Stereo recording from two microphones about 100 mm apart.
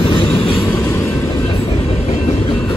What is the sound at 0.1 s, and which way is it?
Train, 65° left (ahead or behind).